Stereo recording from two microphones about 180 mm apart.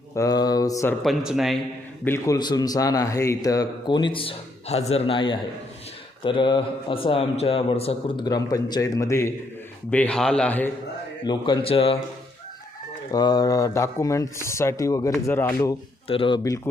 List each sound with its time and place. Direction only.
0.1 s a man's voice: 20° left (ahead or behind)
1.0 s speech: centre (ahead or behind)
2.0 s a man's voice: 15° left (ahead or behind)
11.3 s a man's voice: 25° left (ahead or behind)
13.1 s a man's voice: 20° left (ahead or behind)
16.0 s a man's voice: 30° left (ahead or behind)